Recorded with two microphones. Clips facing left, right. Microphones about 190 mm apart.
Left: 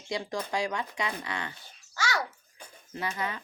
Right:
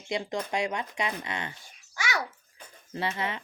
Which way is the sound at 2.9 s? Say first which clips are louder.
Right 2 dB; 25° right (ahead or behind).